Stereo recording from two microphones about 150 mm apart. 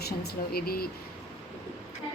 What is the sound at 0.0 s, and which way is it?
Speech, 90° left.